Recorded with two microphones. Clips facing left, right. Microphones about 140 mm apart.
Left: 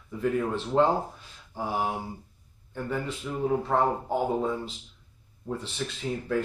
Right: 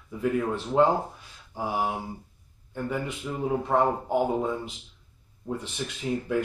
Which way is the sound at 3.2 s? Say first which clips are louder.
Left 1 dB; 10° right (ahead or behind).